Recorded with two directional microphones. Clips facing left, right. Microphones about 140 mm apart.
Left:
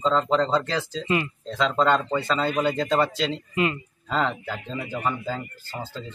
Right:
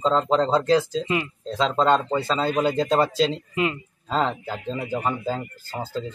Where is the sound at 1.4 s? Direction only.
30° right (ahead or behind).